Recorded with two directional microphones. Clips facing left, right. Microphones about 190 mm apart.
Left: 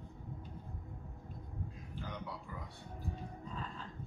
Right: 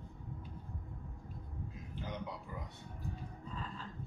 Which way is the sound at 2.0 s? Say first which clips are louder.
Right 2 dB; 20° right (ahead or behind).